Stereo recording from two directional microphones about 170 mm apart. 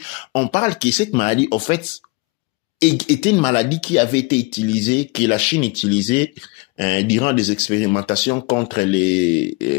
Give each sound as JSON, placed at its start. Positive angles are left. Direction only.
{"t": 0.0, "sound": "speech", "side_deg": 35}